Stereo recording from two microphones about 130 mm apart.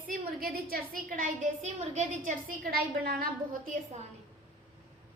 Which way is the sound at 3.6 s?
80° right.